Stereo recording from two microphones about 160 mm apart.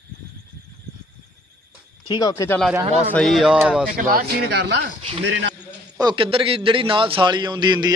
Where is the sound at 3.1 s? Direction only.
Centre (ahead or behind).